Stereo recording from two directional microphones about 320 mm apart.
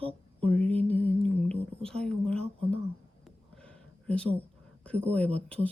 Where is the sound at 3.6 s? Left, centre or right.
Centre.